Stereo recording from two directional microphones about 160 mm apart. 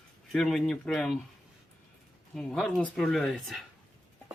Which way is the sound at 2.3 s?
5° left (ahead or behind).